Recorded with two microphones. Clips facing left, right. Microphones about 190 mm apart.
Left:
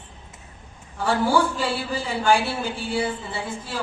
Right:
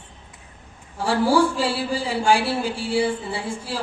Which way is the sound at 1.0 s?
30° right (ahead or behind).